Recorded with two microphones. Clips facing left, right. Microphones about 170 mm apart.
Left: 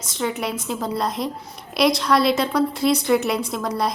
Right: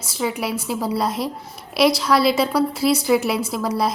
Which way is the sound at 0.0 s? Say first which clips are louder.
Right 1 dB; 5° right (ahead or behind).